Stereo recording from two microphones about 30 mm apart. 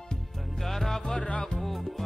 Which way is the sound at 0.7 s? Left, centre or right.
Centre.